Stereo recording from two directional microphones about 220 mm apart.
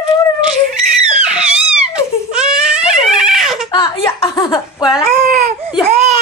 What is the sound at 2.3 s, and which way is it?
Baby cry, 5° right (ahead or behind).